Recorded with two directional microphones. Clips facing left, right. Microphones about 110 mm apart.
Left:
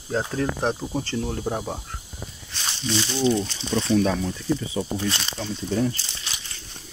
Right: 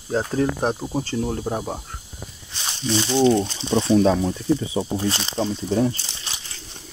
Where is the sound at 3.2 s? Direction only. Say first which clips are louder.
Right 5 dB; 60° right (ahead or behind).